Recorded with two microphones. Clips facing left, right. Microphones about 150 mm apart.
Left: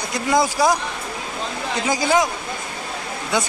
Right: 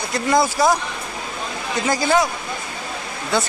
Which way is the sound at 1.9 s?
15° left (ahead or behind).